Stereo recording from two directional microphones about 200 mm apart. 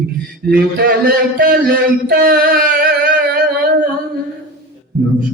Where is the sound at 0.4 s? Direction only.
50° right (ahead or behind).